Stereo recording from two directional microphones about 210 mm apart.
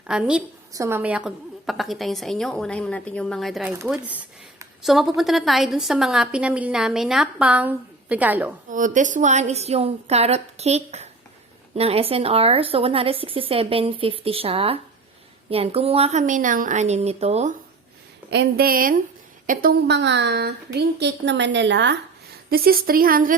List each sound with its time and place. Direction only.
0.1 s a woman's voice: 5° right (ahead or behind)
8.7 s a woman's voice: 35° right (ahead or behind)
18.3 s a woman's voice: 50° right (ahead or behind)
22.4 s a woman's voice: 45° right (ahead or behind)